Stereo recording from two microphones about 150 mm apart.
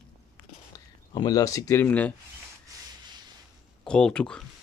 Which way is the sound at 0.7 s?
25° left (ahead or behind).